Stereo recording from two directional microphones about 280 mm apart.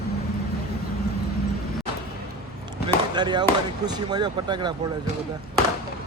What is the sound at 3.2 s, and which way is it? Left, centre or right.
Speech, centre.